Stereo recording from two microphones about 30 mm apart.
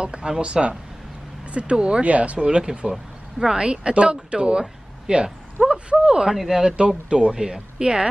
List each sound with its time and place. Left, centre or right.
0.0 s speech: right
2.0 s speech: right
2.4 s speech: right
2.9 s a sound: centre
3.5 s speech: right
5.6 s speech: centre
6.0 s speech: right
6.3 s speech: centre
7.1 s speech: right